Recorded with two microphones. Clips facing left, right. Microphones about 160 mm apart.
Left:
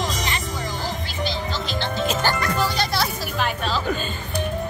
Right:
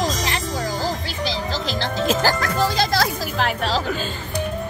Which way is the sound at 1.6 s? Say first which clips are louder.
Right 3 dB; 90° right.